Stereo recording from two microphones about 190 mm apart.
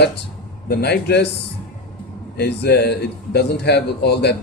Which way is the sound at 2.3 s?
60° left (ahead or behind).